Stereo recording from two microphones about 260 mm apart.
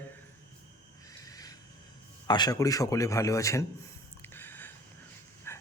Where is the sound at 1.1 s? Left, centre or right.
Centre.